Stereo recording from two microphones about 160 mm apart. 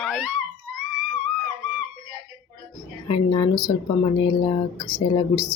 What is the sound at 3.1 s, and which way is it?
Speech, 35° left (ahead or behind).